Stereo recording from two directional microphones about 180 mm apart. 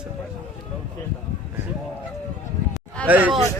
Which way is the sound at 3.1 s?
10° right (ahead or behind).